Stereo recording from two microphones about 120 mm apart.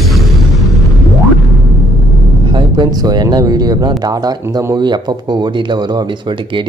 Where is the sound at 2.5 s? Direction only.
35° right (ahead or behind).